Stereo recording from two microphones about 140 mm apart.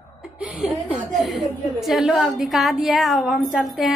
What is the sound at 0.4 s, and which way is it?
Chuckle, 5° right (ahead or behind).